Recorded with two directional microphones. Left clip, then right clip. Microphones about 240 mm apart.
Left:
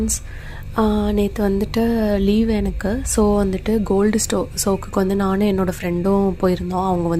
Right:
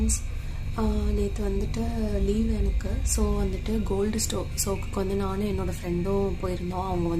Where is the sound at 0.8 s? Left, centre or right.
Left.